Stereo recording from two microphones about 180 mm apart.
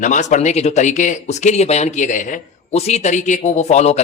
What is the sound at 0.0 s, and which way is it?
Speech, 40° left (ahead or behind).